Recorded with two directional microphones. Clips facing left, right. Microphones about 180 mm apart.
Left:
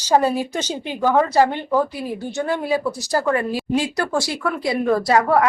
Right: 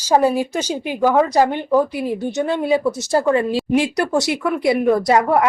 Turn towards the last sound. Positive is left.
turn(degrees=-20)  # may be behind; listen again after turning